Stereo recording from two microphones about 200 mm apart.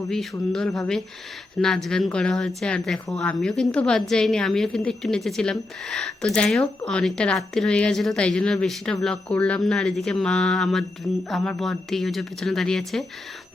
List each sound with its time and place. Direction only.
0.1 s a woman's voice: centre (ahead or behind)